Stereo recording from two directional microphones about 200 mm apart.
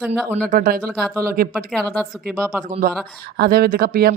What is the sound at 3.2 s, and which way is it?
Speech, 50° right (ahead or behind).